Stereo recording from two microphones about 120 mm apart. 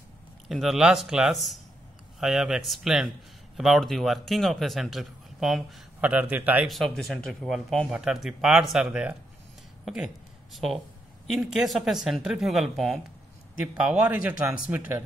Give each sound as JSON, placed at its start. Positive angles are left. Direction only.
{"t": 0.5, "sound": "a man's voice", "side_deg": 0}
{"t": 5.9, "sound": "a man's voice", "side_deg": -10}
{"t": 7.0, "sound": "a man's voice", "side_deg": 0}